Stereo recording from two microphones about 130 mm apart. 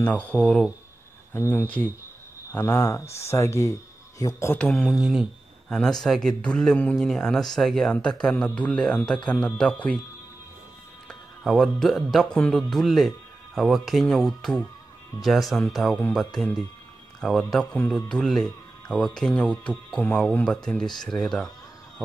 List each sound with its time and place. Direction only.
0.0 s speech: 10° left (ahead or behind)
1.3 s speech: 20° left (ahead or behind)
4.6 s speech: 5° left (ahead or behind)
11.1 s speech: 5° left (ahead or behind)